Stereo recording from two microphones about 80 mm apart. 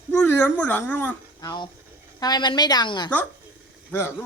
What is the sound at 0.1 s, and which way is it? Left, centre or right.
Speech, centre.